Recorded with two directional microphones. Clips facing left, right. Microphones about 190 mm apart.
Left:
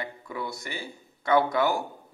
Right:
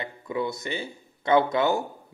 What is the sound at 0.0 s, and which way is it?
Speech, 20° right (ahead or behind).